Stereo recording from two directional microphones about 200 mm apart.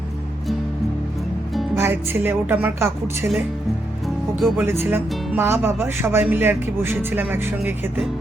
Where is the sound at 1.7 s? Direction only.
10° right (ahead or behind).